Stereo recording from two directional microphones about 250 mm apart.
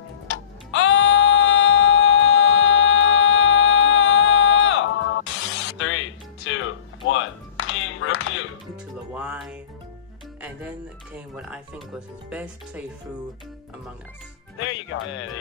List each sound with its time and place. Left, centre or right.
0.7 s music: left
9.1 s music: centre
11.1 s speech: centre
14.6 s speech: left